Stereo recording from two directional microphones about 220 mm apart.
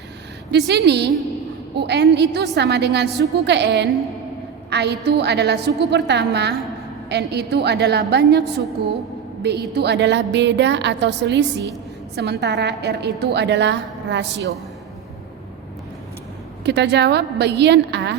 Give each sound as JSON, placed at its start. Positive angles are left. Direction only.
{"t": 0.5, "sound": "a woman's voice", "side_deg": -50}
{"t": 16.6, "sound": "a woman's voice", "side_deg": -50}